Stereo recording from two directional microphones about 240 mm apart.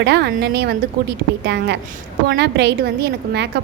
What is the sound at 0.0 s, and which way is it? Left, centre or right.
A woman's voice, right.